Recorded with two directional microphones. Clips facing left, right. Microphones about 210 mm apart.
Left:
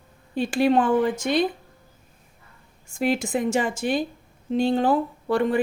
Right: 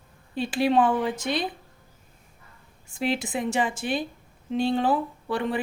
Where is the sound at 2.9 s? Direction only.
45° left (ahead or behind).